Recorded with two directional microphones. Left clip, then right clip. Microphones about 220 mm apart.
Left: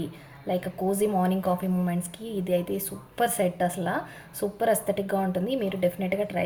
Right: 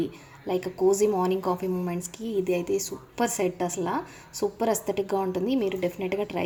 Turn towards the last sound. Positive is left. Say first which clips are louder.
# left 1 dB
turn(degrees=-30)  # may be behind; listen again after turning